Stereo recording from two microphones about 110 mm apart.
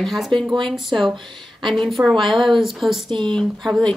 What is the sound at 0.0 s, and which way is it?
Speech, centre (ahead or behind).